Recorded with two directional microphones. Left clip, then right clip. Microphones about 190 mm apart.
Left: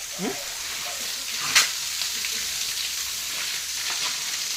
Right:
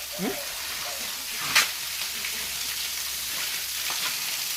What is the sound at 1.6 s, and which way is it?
Frying, 35° left (ahead or behind).